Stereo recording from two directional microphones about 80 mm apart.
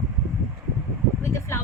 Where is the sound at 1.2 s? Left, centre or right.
Left.